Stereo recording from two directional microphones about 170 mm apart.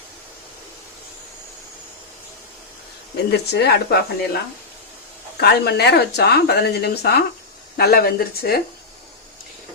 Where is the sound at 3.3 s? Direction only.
75° left (ahead or behind).